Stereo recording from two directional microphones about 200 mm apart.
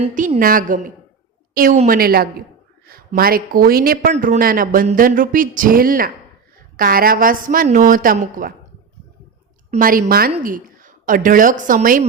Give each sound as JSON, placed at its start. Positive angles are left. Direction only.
{"t": 0.0, "sound": "a woman's voice", "side_deg": -35}
{"t": 9.7, "sound": "a woman's voice", "side_deg": -45}